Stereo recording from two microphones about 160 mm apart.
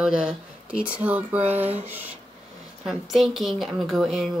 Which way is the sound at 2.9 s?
Centre (ahead or behind).